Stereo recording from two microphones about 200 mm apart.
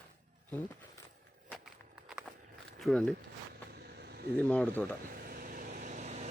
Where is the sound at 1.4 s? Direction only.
Centre (ahead or behind).